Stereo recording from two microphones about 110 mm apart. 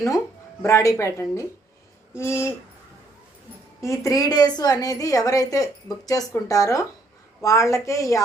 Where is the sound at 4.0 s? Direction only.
30° left (ahead or behind).